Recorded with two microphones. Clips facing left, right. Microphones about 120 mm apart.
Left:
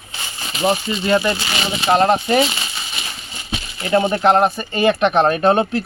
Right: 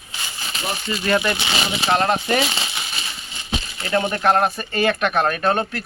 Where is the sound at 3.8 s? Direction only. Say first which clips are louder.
Left 5 dB; 25° left (ahead or behind).